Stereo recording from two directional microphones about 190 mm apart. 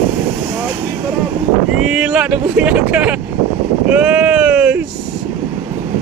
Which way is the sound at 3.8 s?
5° right (ahead or behind).